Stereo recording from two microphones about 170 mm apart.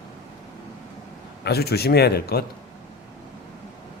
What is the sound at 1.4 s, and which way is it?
Speech, 70° left (ahead or behind).